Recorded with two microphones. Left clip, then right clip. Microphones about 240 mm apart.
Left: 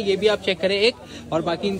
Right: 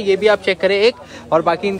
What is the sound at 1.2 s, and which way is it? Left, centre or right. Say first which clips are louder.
Speech: right 9 dB; right.